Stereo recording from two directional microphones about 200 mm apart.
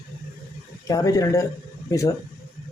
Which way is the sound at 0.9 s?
15° left (ahead or behind).